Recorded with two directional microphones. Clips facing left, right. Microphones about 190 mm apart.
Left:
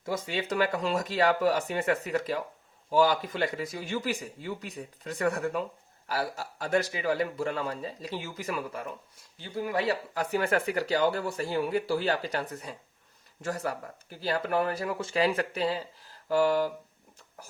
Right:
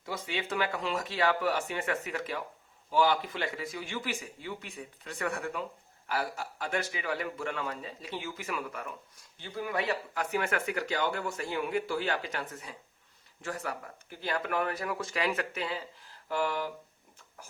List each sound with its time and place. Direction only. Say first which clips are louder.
0.0 s speech: left 4 dB; 45° left (ahead or behind)